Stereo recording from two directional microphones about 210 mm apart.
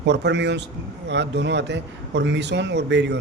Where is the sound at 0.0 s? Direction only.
55° right (ahead or behind).